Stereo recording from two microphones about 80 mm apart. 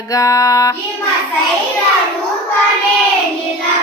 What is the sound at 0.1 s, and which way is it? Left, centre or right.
Music, left.